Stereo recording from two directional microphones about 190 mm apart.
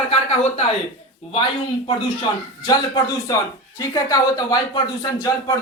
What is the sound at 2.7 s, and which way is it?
Speech, 20° left (ahead or behind).